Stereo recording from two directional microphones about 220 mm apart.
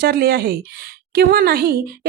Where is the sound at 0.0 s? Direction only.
45° right (ahead or behind).